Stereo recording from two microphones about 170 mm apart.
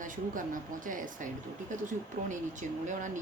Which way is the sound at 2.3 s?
45° right (ahead or behind).